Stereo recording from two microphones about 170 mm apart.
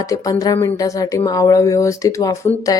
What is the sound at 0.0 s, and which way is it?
Speech, 20° left (ahead or behind).